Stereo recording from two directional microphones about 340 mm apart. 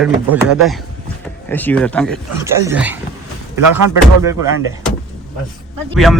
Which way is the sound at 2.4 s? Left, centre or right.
Centre.